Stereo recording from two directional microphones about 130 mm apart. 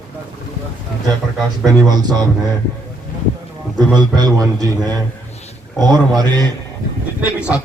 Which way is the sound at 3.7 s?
30° right (ahead or behind).